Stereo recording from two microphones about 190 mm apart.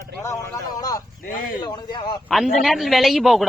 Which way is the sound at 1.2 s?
45° left (ahead or behind).